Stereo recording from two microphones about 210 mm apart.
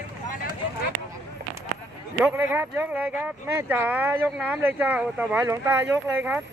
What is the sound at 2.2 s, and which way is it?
Speech, 10° right (ahead or behind).